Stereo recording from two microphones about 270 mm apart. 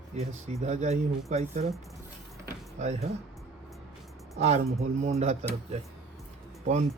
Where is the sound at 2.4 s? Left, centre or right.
Right.